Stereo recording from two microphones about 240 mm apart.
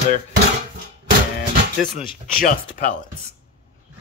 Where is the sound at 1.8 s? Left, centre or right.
Left.